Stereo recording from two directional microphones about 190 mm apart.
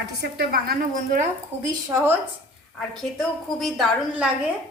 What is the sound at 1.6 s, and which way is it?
Speech, 15° right (ahead or behind).